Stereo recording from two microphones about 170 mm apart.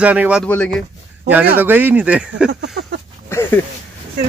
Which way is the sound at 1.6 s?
10° right (ahead or behind).